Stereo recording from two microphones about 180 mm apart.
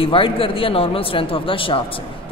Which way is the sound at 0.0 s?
30° left (ahead or behind).